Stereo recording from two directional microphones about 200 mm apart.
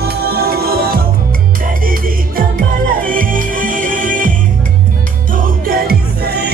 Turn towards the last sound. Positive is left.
turn(degrees=-55)  # may be behind; listen again after turning